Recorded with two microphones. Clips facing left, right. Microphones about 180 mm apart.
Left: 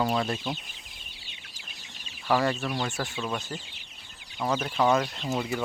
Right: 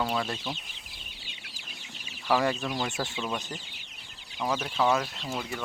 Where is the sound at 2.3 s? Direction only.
10° right (ahead or behind).